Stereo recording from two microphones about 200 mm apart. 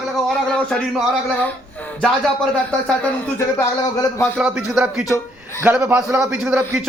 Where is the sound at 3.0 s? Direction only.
15° left (ahead or behind).